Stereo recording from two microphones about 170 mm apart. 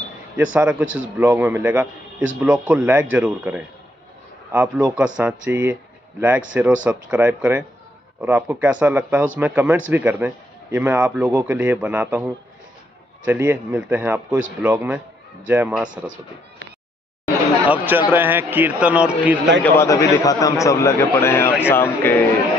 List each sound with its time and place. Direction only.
0.4 s speech: 10° right (ahead or behind)
17.6 s speech: 10° right (ahead or behind)
19.6 s a man's voice: 15° left (ahead or behind)